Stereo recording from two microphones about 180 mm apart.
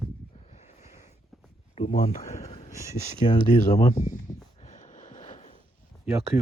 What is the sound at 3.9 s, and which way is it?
Speech, 45° left (ahead or behind).